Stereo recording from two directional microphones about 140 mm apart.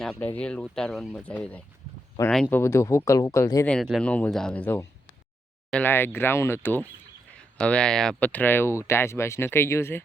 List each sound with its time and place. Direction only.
0.0 s speech: 5° left (ahead or behind)
2.6 s speech: 20° left (ahead or behind)
3.7 s speech: 5° left (ahead or behind); by 10.0 s 20° left (ahead or behind)